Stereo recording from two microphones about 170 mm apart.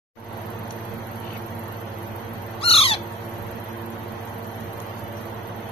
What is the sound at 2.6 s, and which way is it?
Owl, 35° left (ahead or behind).